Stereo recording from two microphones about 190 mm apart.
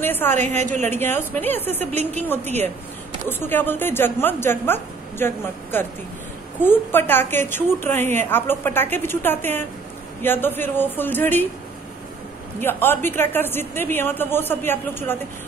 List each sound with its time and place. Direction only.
0.0 s a woman's voice: 10° left (ahead or behind)
0.6 s a woman's voice: 40° right (ahead or behind)
0.8 s a woman's voice: 10° left (ahead or behind)
12.5 s a woman's voice: 10° left (ahead or behind)